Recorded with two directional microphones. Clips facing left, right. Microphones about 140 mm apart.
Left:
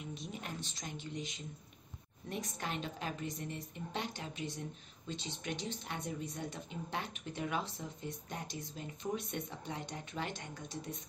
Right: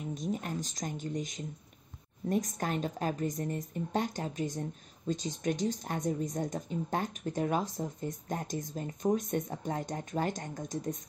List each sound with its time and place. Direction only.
0.1 s a woman's voice: 45° right (ahead or behind)